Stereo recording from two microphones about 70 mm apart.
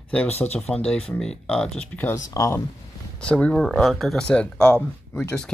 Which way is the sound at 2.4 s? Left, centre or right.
Left.